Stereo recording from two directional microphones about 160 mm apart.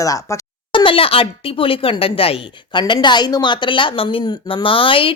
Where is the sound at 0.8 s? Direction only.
35° left (ahead or behind).